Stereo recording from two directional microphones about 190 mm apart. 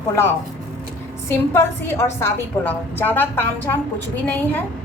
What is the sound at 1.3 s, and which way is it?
A woman's voice, 10° left (ahead or behind).